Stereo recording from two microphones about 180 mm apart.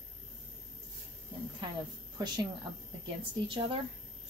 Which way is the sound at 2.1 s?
25° right (ahead or behind).